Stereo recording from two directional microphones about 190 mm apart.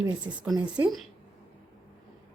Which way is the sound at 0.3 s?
15° right (ahead or behind).